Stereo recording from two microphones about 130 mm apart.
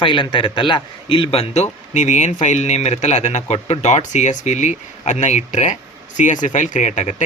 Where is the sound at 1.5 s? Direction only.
60° left (ahead or behind).